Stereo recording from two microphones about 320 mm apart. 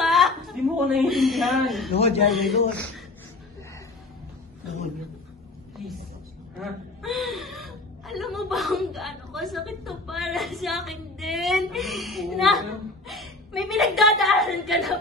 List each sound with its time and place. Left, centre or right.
0.0 s a sound: centre
2.0 s a man's voice: centre
2.2 s a man's voice: centre
6.6 s a woman's voice: centre